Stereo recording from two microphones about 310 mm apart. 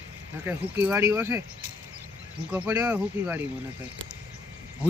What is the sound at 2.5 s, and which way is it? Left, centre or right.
Speech, centre.